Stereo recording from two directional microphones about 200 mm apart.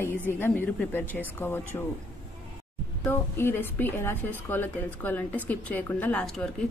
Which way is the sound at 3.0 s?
10° left (ahead or behind).